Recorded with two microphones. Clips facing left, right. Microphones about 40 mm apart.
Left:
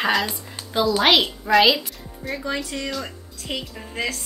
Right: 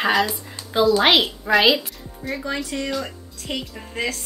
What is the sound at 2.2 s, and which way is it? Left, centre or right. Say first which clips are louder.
A woman's voice: even; centre.